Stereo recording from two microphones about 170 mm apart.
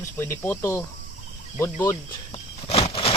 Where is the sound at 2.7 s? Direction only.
35° left (ahead or behind).